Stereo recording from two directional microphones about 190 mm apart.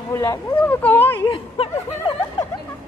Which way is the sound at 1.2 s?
30° left (ahead or behind).